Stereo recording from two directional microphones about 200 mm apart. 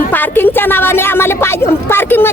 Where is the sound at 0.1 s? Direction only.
10° left (ahead or behind).